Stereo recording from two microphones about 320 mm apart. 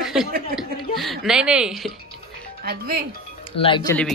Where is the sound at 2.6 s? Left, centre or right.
Right.